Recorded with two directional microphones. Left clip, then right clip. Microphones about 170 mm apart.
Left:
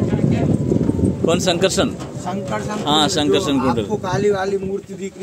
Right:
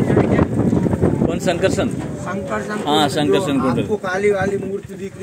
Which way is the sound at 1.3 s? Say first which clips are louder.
Left 1 dB; 20° left (ahead or behind).